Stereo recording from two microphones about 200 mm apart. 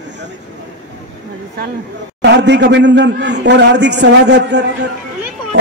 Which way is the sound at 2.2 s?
60° right (ahead or behind).